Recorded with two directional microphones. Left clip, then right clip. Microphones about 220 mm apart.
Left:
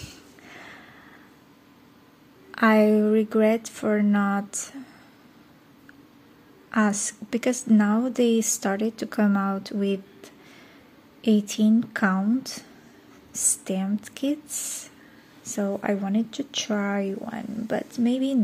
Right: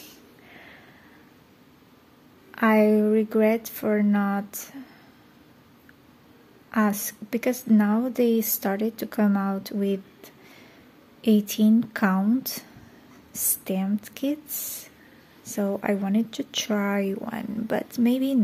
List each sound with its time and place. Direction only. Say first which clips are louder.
0.0 s snort: left 3 dB; 15° left (ahead or behind)
2.5 s speech: left 1 dB; centre (ahead or behind)
6.7 s speech: left 1 dB; centre (ahead or behind)